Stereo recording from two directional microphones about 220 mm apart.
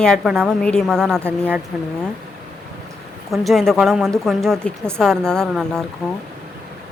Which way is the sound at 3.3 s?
Centre (ahead or behind).